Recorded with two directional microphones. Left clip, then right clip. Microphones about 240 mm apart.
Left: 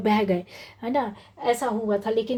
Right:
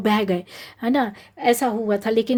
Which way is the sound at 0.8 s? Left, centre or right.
Right.